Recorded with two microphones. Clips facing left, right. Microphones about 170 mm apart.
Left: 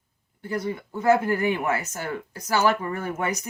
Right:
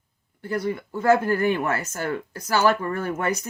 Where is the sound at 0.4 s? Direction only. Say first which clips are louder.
Right 2 dB; 20° left (ahead or behind).